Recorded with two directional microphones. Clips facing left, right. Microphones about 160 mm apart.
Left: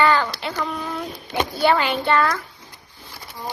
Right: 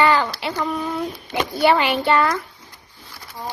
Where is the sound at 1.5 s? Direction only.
20° right (ahead or behind).